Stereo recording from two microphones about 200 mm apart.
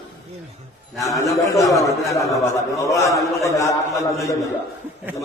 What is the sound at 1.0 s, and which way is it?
A man's voice, 15° left (ahead or behind).